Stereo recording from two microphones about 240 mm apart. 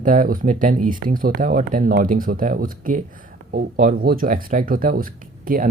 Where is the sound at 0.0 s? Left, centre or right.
Right.